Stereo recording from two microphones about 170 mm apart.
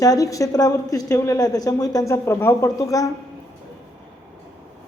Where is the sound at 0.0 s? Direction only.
20° left (ahead or behind).